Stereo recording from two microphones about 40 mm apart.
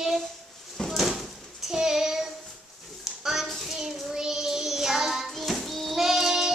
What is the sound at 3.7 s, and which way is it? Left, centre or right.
Child singing, centre.